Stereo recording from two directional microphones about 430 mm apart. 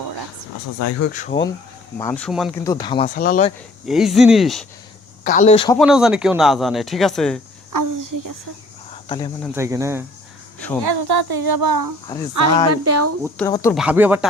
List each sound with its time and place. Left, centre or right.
0.8 s speech: left
1.0 s speech: centre
2.0 s speech: centre
3.8 s speech: centre
5.2 s speech: centre
5.8 s speech: centre
7.7 s a sound: right
9.0 s speech: centre
9.6 s speech: centre
10.8 s speech: right
12.3 s speech: right
13.2 s speech: centre